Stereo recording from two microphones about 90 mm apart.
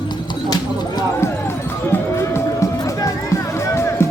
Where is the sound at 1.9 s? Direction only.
30° left (ahead or behind).